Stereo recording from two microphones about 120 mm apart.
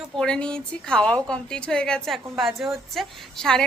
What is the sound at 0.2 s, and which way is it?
A woman's voice, 10° left (ahead or behind).